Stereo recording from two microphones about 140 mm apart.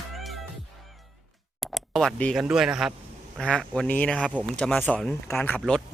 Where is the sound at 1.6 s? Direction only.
Centre (ahead or behind).